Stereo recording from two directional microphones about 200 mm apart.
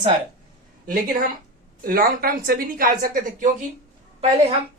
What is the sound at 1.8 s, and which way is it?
A woman's voice, 45° right (ahead or behind).